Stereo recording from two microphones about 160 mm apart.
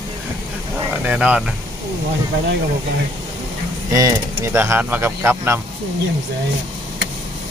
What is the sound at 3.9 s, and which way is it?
Speech, 20° right (ahead or behind).